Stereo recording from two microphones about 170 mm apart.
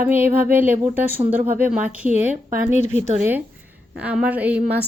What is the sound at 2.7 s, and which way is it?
Speech, 45° left (ahead or behind).